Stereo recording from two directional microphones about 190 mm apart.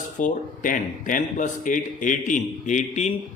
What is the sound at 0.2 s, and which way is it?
A man's voice, 45° left (ahead or behind).